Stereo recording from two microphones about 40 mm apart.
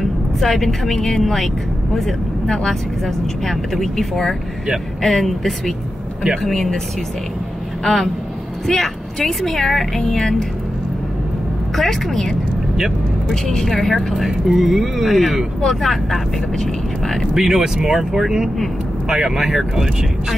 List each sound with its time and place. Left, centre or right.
0.0 s speech: centre
7.8 s speech: centre
11.7 s speech: centre
13.7 s speech: centre
17.3 s speech: centre